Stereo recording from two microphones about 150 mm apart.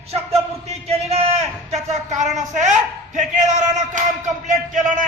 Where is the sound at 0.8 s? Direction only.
45° right (ahead or behind).